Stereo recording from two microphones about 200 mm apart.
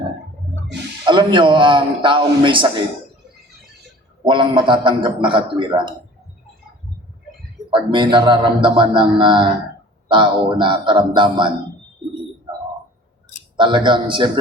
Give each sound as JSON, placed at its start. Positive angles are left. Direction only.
{"t": 1.0, "sound": "speech", "side_deg": -25}
{"t": 4.2, "sound": "speech", "side_deg": -25}
{"t": 7.7, "sound": "speech", "side_deg": -25}
{"t": 13.6, "sound": "speech", "side_deg": -25}